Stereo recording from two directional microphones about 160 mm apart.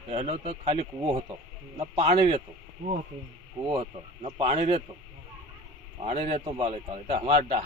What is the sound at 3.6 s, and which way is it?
A man's voice, 35° right (ahead or behind).